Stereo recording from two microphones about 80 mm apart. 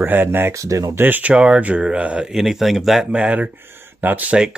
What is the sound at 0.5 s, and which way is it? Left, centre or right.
Speech, right.